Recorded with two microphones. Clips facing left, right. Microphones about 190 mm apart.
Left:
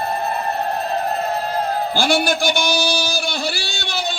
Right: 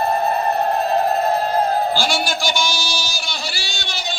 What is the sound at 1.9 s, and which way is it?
A man's voice, 55° left (ahead or behind).